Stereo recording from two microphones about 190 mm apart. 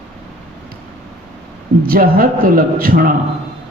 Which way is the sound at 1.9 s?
50° right (ahead or behind).